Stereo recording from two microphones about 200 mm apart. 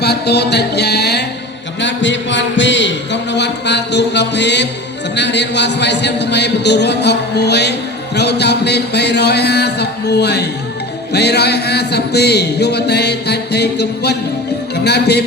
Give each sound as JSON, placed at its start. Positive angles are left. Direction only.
{"t": 0.0, "sound": "a man's voice", "side_deg": 55}